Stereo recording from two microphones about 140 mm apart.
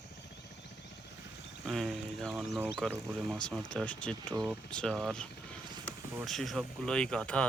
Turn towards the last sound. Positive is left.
turn(degrees=5)  # may be behind; listen again after turning